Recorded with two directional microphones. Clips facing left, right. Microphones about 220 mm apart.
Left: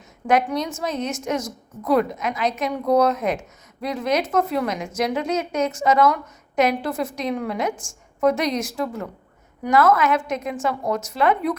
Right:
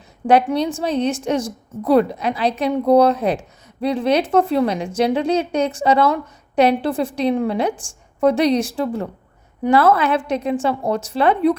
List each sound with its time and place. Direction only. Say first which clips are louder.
0.3 s a woman's voice: right 5 dB; 30° right (ahead or behind)